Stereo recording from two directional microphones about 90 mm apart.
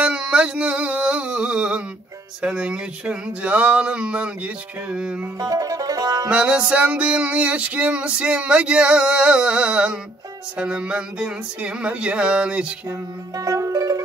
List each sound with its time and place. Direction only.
0.0 s music: 10° right (ahead or behind)
5.4 s music: 40° right (ahead or behind)
6.3 s music: 10° right (ahead or behind)
13.4 s music: 40° right (ahead or behind)